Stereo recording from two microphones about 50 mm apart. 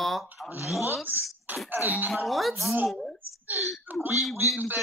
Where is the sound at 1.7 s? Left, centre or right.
Right.